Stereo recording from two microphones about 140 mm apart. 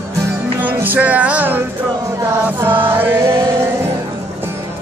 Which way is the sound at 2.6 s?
15° right (ahead or behind).